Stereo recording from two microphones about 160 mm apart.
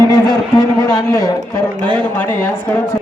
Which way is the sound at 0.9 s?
20° left (ahead or behind).